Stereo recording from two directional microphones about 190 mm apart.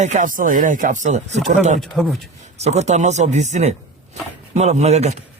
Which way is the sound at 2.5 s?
35° right (ahead or behind).